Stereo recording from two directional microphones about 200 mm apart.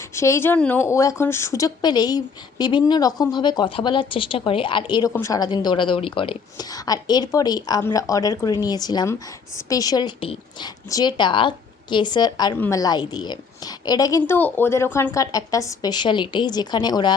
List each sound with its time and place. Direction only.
0.1 s a woman's voice: 15° left (ahead or behind)